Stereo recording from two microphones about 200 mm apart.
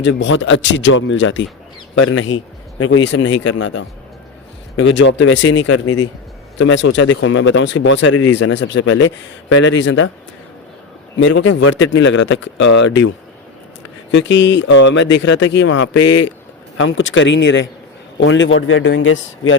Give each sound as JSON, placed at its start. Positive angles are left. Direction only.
{"t": 0.0, "sound": "speech", "side_deg": 65}
{"t": 2.0, "sound": "a man's voice", "side_deg": 90}
{"t": 2.8, "sound": "speech", "side_deg": 75}
{"t": 11.2, "sound": "speech", "side_deg": 70}
{"t": 16.7, "sound": "speech", "side_deg": 75}